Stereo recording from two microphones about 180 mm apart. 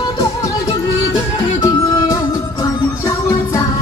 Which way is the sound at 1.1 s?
20° left (ahead or behind).